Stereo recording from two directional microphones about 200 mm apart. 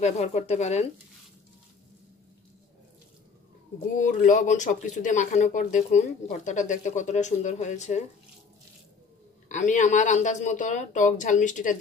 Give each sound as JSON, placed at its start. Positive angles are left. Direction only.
{"t": 0.0, "sound": "speech", "side_deg": 35}
{"t": 4.0, "sound": "speech", "side_deg": 40}
{"t": 9.5, "sound": "speech", "side_deg": 40}